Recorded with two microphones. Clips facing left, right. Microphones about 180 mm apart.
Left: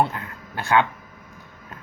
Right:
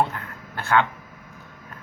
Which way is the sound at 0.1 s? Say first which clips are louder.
Left 1 dB; 15° left (ahead or behind).